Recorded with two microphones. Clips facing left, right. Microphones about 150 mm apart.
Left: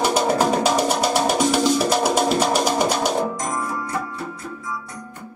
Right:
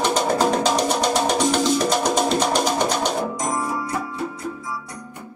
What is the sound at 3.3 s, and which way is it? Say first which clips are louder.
Music: right 1 dB; 15° right (ahead or behind).